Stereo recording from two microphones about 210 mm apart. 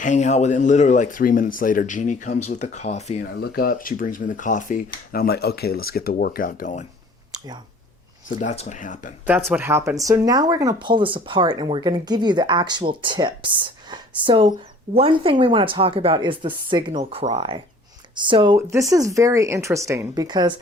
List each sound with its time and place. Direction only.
0.0 s speech: 35° left (ahead or behind)
3.4 s speech: 45° left (ahead or behind)
8.4 s speech: 35° left (ahead or behind)
9.2 s speech: 10° right (ahead or behind)